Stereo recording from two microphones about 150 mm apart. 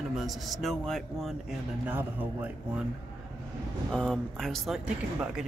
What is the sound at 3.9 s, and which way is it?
Speech, 5° left (ahead or behind).